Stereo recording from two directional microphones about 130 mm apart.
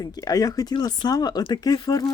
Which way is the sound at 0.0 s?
30° left (ahead or behind).